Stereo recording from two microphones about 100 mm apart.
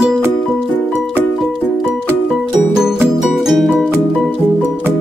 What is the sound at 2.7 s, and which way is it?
Music, 5° right (ahead or behind).